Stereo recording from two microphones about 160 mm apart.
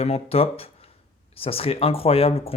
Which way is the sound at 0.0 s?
40° left (ahead or behind).